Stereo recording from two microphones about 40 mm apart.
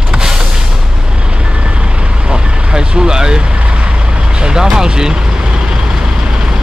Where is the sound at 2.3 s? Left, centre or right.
Right.